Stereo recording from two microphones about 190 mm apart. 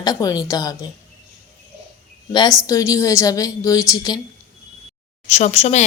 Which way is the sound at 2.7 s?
15° left (ahead or behind).